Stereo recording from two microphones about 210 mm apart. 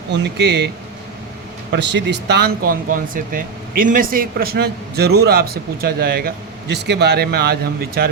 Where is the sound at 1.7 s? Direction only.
55° right (ahead or behind).